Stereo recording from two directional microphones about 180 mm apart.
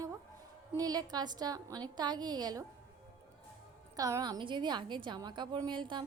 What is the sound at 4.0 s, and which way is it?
A woman's voice, 20° right (ahead or behind).